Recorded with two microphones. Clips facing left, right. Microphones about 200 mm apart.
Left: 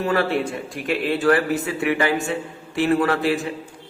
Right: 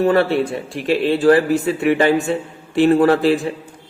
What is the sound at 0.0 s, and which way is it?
A man's voice, 35° right (ahead or behind).